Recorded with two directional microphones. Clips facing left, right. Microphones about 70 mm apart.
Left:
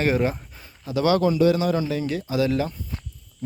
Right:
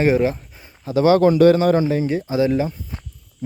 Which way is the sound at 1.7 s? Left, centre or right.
Right.